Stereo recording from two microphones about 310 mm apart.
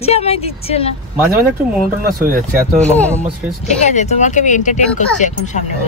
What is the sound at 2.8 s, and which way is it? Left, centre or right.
Speech, centre.